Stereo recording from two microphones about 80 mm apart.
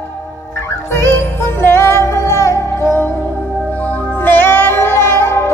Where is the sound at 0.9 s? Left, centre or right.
Left.